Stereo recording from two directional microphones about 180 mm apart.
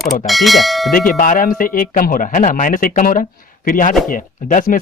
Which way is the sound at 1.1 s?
50° left (ahead or behind).